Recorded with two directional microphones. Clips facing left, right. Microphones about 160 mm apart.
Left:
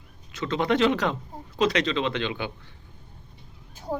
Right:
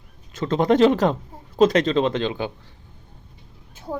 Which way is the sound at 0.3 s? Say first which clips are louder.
Right 6 dB; 45° right (ahead or behind).